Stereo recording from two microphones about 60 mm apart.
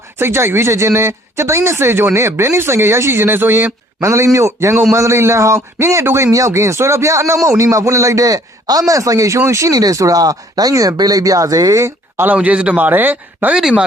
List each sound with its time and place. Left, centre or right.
0.2 s speech: right
4.0 s a man's voice: right
6.3 s a man's voice: right
8.9 s speech: right
12.1 s speech: right
12.4 s speech: right
13.5 s speech: centre